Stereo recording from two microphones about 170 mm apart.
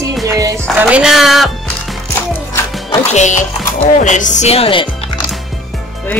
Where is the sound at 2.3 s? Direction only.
15° left (ahead or behind).